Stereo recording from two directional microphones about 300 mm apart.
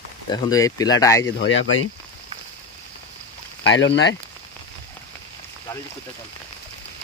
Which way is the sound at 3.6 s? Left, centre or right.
Left.